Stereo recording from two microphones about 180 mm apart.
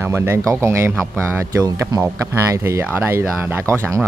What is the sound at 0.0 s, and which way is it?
Speech, 15° right (ahead or behind).